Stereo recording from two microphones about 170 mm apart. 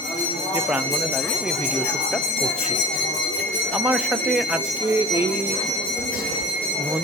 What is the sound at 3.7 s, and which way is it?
Speech, 5° right (ahead or behind).